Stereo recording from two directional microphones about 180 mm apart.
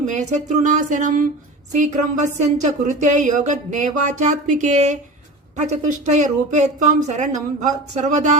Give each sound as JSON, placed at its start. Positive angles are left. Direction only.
{"t": 0.0, "sound": "speech", "side_deg": -40}